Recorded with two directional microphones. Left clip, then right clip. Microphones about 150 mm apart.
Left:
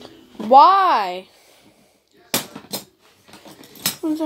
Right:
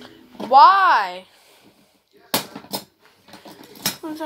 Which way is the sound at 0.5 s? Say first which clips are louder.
Even; 25° left (ahead or behind).